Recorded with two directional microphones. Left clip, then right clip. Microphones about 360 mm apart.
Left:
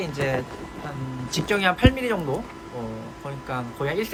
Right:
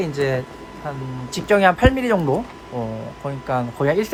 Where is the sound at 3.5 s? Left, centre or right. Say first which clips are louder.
Right 8 dB; right.